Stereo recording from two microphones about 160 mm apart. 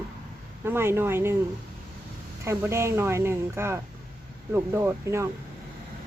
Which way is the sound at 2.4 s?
15° right (ahead or behind).